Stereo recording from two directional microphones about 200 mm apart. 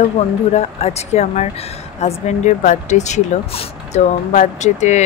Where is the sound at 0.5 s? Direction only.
30° left (ahead or behind).